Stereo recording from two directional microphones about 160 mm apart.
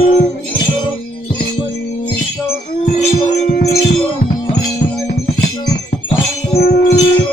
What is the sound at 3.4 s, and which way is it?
Music, 45° left (ahead or behind).